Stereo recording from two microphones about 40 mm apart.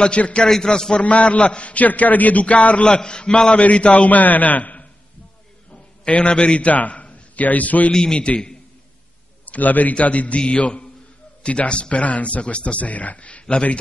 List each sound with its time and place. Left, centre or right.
0.0 s speech: left
0.5 s a man's voice: centre
1.0 s a man's voice: left
6.0 s a man's voice: left
7.9 s speech: centre
9.5 s a man's voice: left
12.8 s a man's voice: left